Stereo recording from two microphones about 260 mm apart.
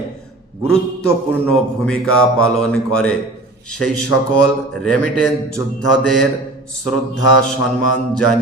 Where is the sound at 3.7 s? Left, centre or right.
Left.